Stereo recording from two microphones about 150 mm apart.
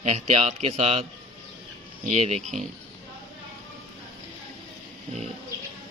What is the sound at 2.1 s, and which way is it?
Speech, 45° right (ahead or behind).